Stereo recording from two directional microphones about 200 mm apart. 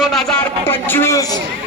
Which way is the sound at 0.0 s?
Centre (ahead or behind).